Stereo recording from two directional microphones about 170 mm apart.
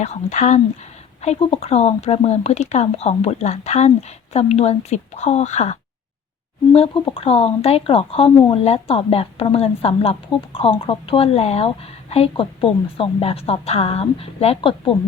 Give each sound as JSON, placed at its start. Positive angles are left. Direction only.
{"t": 0.0, "sound": "speech", "side_deg": 45}
{"t": 6.7, "sound": "speech", "side_deg": 30}